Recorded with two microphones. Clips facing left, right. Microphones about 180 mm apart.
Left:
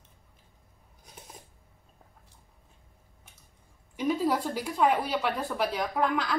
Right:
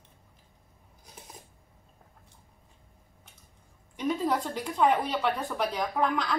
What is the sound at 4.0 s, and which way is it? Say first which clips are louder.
Speech: left 1 dB; 10° left (ahead or behind).